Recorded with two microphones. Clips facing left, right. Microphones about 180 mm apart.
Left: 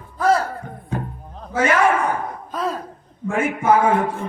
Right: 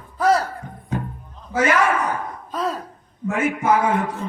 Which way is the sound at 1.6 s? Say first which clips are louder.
Left 1 dB; 30° left (ahead or behind).